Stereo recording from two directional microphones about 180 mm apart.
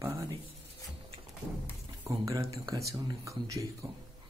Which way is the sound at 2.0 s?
15° right (ahead or behind).